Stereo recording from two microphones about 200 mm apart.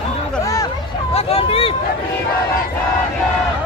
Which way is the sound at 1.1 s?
30° left (ahead or behind).